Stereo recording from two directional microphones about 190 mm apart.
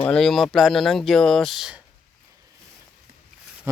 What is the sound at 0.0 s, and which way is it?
Speech, 5° left (ahead or behind).